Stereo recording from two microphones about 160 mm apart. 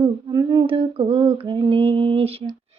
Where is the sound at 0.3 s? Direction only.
25° right (ahead or behind).